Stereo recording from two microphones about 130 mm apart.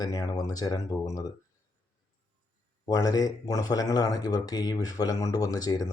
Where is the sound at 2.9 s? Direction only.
30° left (ahead or behind).